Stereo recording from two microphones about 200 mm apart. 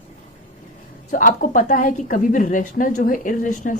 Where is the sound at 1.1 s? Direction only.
40° left (ahead or behind).